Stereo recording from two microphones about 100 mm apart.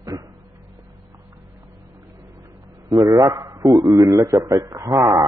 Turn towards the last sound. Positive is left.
turn(degrees=-35)  # may be behind; listen again after turning